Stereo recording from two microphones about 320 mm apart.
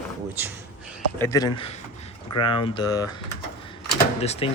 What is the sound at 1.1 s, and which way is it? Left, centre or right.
Speech, centre.